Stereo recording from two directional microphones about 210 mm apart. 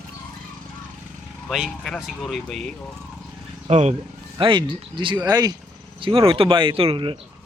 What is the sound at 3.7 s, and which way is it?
Speech, 30° right (ahead or behind).